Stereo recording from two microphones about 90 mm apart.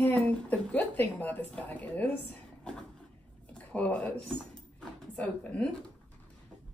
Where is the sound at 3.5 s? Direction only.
15° left (ahead or behind).